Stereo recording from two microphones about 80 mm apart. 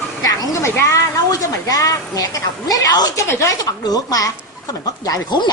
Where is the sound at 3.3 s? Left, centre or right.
Left.